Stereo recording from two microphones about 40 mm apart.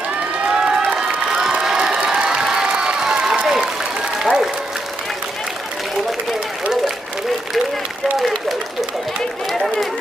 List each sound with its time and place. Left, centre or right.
0.5 s crowd: centre
2.7 s applause: centre
8.1 s a sound: centre